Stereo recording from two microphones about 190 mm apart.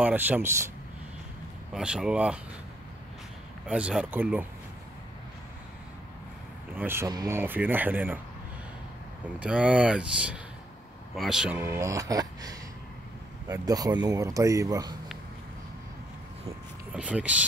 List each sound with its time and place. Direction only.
0.0 s speech: 10° right (ahead or behind)
1.7 s speech: 5° right (ahead or behind)
3.6 s speech: 5° right (ahead or behind)
6.7 s speech: 10° right (ahead or behind)
9.4 s speech: 5° right (ahead or behind)
16.9 s speech: 5° right (ahead or behind)